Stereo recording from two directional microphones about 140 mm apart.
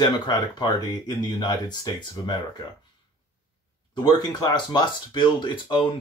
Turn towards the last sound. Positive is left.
turn(degrees=35)  # may be behind; listen again after turning